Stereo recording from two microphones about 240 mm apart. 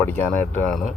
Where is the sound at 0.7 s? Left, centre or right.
Centre.